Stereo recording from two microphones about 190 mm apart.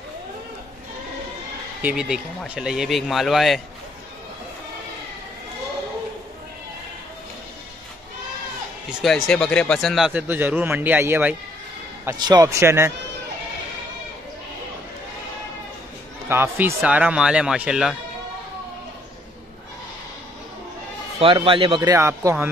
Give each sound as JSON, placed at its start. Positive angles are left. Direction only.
{"t": 1.8, "sound": "speech", "side_deg": -5}
{"t": 9.0, "sound": "speech", "side_deg": 5}
{"t": 16.3, "sound": "speech", "side_deg": -10}
{"t": 21.2, "sound": "a man's voice", "side_deg": -30}
{"t": 21.9, "sound": "speech", "side_deg": -15}